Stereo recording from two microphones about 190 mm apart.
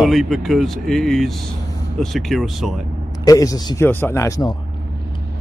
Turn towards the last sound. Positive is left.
turn(degrees=15)  # may be behind; listen again after turning